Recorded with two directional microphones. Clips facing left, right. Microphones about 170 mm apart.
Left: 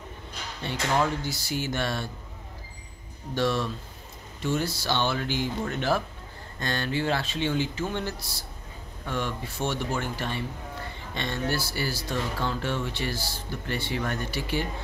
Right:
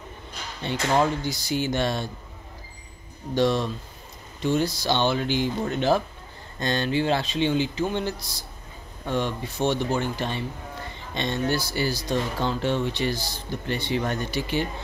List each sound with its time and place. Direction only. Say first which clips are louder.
0.9 s speech: right 4 dB; 20° right (ahead or behind)
3.3 s speech: right 4 dB; 20° right (ahead or behind)